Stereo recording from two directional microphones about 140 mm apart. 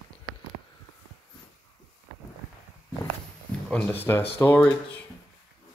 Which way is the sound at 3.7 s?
10° left (ahead or behind).